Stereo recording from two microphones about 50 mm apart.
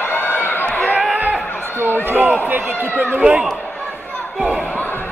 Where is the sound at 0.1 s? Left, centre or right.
Left.